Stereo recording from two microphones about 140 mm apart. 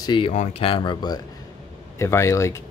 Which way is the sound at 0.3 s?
50° left (ahead or behind).